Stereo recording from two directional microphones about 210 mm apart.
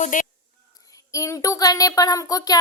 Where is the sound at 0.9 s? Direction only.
15° left (ahead or behind).